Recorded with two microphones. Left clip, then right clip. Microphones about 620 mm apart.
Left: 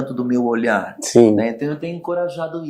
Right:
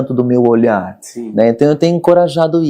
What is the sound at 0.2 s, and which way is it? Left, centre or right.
Speech, right.